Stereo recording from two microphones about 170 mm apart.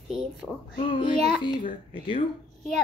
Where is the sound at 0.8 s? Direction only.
30° left (ahead or behind).